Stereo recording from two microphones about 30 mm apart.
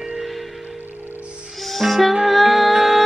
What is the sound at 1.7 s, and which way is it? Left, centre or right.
Music, centre.